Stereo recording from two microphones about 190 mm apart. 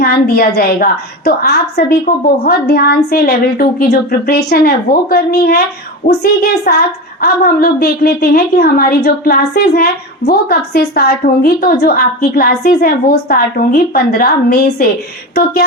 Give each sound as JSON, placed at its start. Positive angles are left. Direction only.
{"t": 0.0, "sound": "a woman's voice", "side_deg": 50}